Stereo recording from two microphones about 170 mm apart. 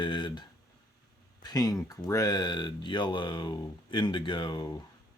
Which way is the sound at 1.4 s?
25° left (ahead or behind).